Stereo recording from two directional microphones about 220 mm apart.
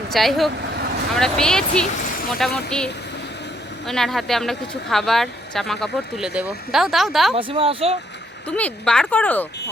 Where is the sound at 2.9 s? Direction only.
50° left (ahead or behind).